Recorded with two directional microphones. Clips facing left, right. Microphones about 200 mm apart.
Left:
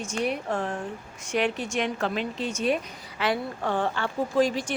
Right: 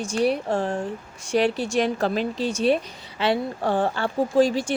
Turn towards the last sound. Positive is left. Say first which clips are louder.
# right 4 dB
turn(degrees=-30)  # may be behind; listen again after turning